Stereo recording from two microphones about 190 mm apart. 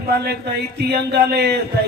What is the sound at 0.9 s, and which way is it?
Speech, 60° right (ahead or behind).